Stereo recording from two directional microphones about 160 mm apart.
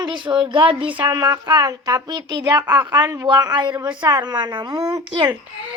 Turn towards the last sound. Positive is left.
turn(degrees=-30)  # may be behind; listen again after turning